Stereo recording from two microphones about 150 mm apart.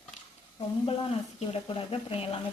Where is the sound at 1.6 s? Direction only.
35° left (ahead or behind).